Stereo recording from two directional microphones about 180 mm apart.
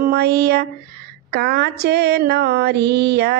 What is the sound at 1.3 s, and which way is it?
Mantra, 60° right (ahead or behind).